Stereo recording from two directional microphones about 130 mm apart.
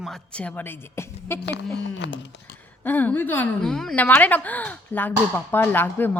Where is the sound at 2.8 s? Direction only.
15° left (ahead or behind).